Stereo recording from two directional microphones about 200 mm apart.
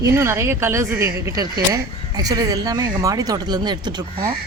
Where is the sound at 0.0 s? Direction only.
15° right (ahead or behind).